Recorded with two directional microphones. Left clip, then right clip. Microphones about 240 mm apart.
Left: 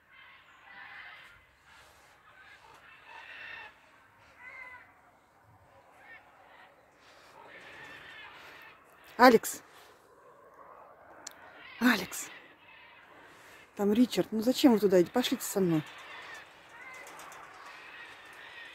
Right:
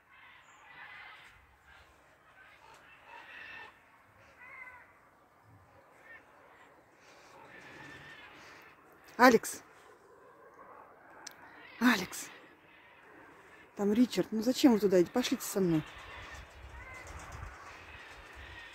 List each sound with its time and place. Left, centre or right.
9.1 s speech: centre
11.3 s a sound: centre
11.8 s cat: centre
13.7 s speech: centre
15.6 s speech: left
17.8 s horse: left